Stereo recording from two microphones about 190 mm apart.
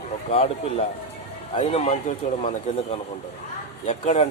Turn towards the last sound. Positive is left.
turn(degrees=35)  # may be behind; listen again after turning